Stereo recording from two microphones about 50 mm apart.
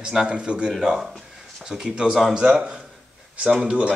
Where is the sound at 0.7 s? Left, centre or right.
Centre.